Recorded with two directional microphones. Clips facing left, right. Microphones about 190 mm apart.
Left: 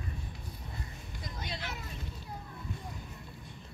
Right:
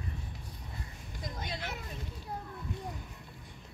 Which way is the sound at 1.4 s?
50° right (ahead or behind).